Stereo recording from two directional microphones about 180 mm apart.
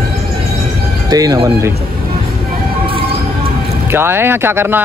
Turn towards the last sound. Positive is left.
turn(degrees=-10)  # may be behind; listen again after turning